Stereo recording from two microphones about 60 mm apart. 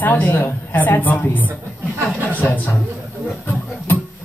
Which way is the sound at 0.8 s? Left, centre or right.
Left.